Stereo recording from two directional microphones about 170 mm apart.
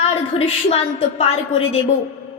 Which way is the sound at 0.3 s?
35° left (ahead or behind).